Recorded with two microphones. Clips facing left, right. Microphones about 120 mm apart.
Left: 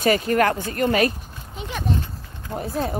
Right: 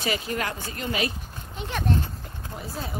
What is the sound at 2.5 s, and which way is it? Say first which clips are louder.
Speech: left 10 dB; 50° left (ahead or behind).